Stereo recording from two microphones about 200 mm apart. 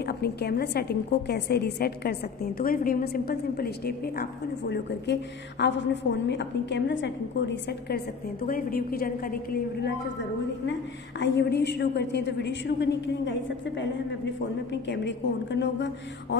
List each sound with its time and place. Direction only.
0.0 s a woman's voice: 55° left (ahead or behind)
11.1 s a woman's voice: 60° left (ahead or behind)